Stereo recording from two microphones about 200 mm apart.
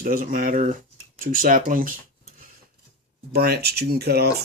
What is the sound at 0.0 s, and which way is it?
Speech, 45° right (ahead or behind).